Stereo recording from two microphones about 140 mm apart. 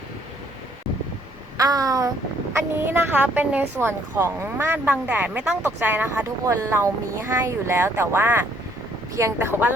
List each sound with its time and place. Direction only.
1.5 s a woman's voice: 25° right (ahead or behind)